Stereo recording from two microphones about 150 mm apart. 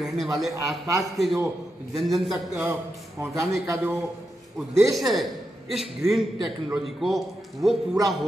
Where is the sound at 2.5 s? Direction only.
15° right (ahead or behind).